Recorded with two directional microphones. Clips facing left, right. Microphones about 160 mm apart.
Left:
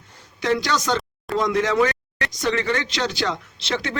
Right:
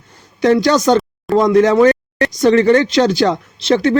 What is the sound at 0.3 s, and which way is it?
Speech, 45° right (ahead or behind).